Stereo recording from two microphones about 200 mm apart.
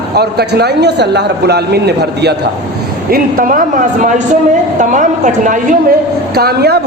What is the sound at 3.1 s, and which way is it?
A man's voice, 45° right (ahead or behind).